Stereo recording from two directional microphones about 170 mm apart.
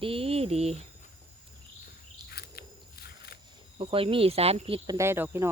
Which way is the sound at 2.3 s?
65° left (ahead or behind).